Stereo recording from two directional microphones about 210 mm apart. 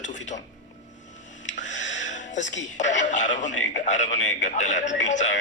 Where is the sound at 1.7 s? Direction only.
60° left (ahead or behind).